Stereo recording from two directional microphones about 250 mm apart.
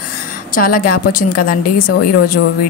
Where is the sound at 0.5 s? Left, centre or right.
Left.